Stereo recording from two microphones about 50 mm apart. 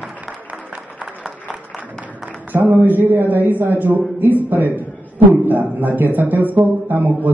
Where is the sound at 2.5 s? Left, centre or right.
Right.